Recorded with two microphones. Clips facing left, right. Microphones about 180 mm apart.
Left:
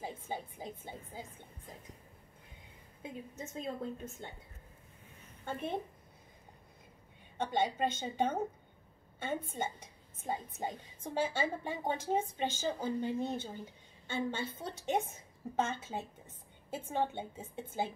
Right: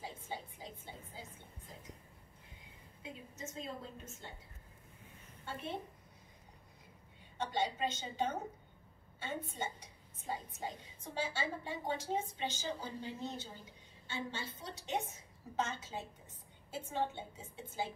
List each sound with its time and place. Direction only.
0.0 s speech: 50° left (ahead or behind)
3.0 s a woman's voice: 55° left (ahead or behind)
5.4 s a woman's voice: 50° left (ahead or behind)
7.3 s a woman's voice: 55° left (ahead or behind)